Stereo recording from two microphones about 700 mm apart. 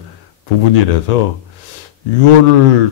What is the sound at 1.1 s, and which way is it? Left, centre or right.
Speech, left.